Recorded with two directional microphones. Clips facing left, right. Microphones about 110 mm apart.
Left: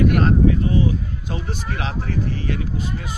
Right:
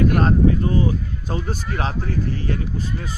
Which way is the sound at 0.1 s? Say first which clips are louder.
Even; 35° right (ahead or behind).